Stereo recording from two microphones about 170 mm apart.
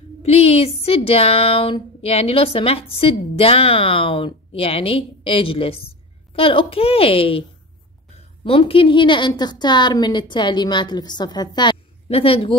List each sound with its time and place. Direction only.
0.2 s speech: 40° left (ahead or behind)
8.5 s a woman's voice: 35° left (ahead or behind)